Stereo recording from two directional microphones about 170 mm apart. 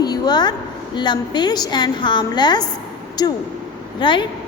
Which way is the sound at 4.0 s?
30° left (ahead or behind).